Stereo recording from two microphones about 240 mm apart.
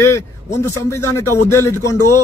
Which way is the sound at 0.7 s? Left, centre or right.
Centre.